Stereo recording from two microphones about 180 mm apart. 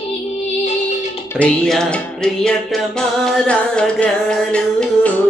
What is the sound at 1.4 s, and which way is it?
Music, 5° left (ahead or behind).